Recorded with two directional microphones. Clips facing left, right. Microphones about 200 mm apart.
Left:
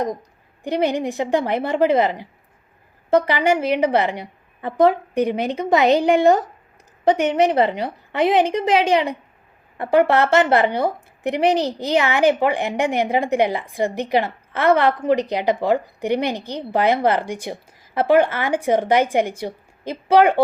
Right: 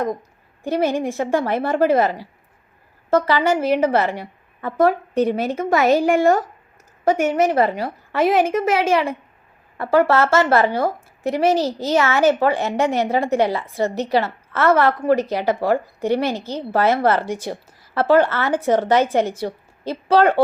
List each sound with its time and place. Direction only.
0.6 s a woman's voice: 15° left (ahead or behind)